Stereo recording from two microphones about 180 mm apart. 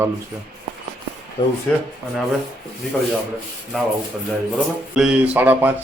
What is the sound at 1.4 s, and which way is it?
Speech, 25° left (ahead or behind).